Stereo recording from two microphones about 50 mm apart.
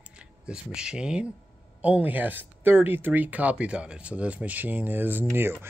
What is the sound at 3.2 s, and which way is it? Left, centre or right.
Speech, right.